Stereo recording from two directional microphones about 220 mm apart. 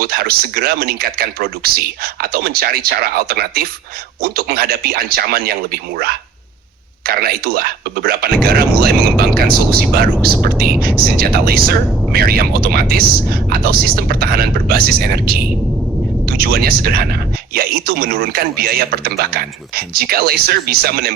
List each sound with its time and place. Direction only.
0.0 s speech: 45° right (ahead or behind)